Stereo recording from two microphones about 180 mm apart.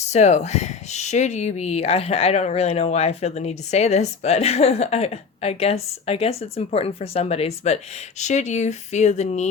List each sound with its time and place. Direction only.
0.1 s speech: 40° left (ahead or behind)